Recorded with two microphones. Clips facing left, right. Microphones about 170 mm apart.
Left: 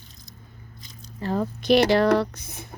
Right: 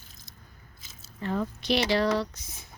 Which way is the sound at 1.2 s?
35° left (ahead or behind).